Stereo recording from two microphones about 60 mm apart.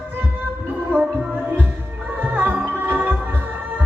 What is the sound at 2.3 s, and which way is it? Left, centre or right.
Music, right.